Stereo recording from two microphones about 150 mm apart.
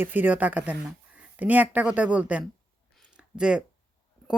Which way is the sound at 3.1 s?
5° right (ahead or behind).